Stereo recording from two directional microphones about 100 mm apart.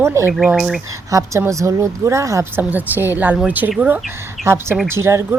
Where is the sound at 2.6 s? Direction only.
15° right (ahead or behind).